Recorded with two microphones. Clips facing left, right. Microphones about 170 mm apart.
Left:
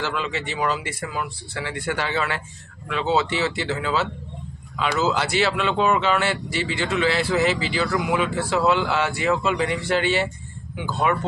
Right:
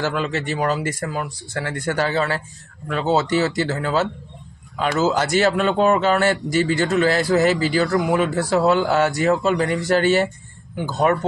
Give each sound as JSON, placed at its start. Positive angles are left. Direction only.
{"t": 0.0, "sound": "speech", "side_deg": -45}